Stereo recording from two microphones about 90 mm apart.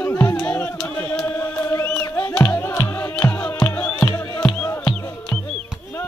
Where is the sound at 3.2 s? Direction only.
15° left (ahead or behind).